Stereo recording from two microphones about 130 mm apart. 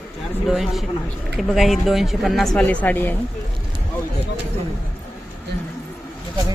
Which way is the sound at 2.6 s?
15° left (ahead or behind).